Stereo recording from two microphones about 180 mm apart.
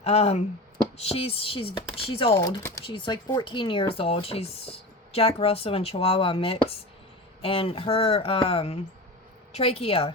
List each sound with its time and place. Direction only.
0.0 s speech: 35° left (ahead or behind)
2.3 s speech: 20° left (ahead or behind)